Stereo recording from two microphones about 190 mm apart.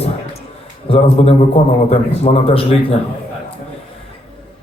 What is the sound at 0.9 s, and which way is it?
A man's voice, 30° left (ahead or behind).